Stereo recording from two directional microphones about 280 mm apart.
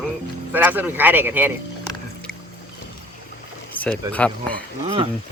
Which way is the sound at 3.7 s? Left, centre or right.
Centre.